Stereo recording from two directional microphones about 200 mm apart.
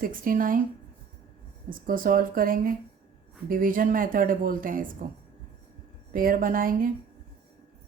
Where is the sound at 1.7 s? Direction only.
45° right (ahead or behind).